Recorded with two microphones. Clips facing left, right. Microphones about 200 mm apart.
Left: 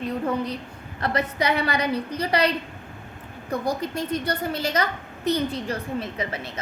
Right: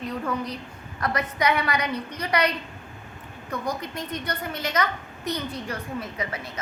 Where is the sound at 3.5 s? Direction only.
30° left (ahead or behind).